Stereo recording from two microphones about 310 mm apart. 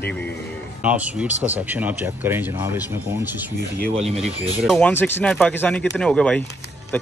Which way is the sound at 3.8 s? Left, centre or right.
Centre.